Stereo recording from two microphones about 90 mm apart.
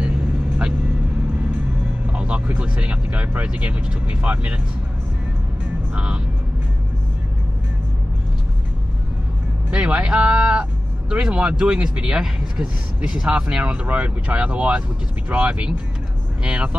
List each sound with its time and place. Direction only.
2.0 s speech: 15° right (ahead or behind)
5.9 s speech: 15° right (ahead or behind)
9.7 s speech: 15° right (ahead or behind)